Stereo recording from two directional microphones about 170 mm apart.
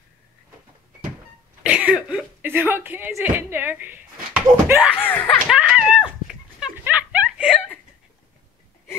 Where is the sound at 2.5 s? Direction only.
15° right (ahead or behind).